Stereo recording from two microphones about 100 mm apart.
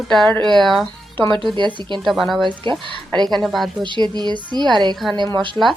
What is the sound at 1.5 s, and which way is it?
Speech, 50° right (ahead or behind).